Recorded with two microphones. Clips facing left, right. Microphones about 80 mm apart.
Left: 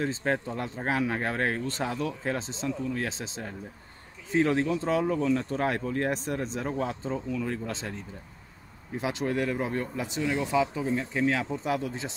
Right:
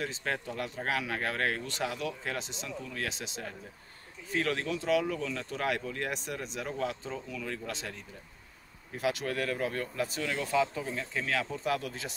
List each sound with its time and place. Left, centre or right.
0.0 s speech: left